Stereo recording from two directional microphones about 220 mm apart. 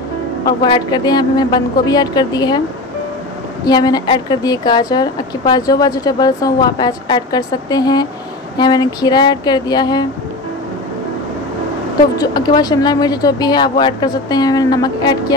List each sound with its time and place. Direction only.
0.5 s speech: 20° left (ahead or behind)
3.6 s a woman's voice: 20° left (ahead or behind)
12.2 s a woman's voice: 20° left (ahead or behind)